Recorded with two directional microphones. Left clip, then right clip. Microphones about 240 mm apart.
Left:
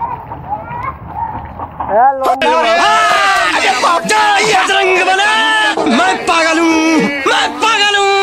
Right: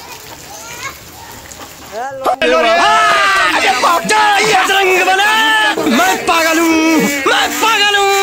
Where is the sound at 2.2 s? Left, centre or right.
Centre.